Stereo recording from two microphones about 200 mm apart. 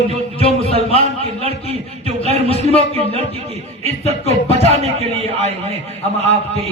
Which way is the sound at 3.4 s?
30° right (ahead or behind).